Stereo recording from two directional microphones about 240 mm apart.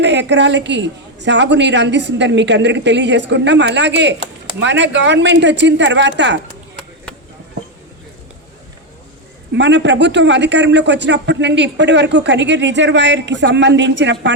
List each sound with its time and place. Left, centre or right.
0.0 s a man's voice: right
9.6 s a man's voice: right